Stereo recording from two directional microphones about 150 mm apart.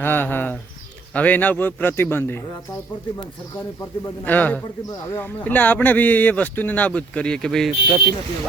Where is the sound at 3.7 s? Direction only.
15° left (ahead or behind).